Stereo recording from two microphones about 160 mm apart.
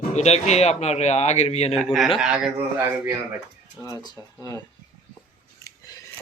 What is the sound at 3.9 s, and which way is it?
Speech, 25° left (ahead or behind).